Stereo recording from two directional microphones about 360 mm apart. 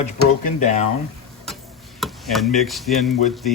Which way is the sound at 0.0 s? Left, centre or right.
Centre.